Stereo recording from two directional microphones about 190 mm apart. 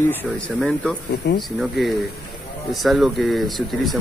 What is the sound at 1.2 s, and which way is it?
Speech, 65° left (ahead or behind).